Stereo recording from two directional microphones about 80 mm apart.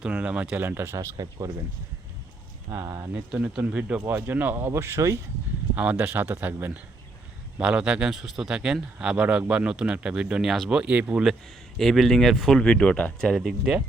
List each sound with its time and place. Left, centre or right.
0.0 s speech: centre
0.9 s speech: right
2.8 s speech: right
3.1 s speech: centre
4.0 s speech: right
5.7 s speech: centre
11.8 s speech: centre
13.1 s speech: centre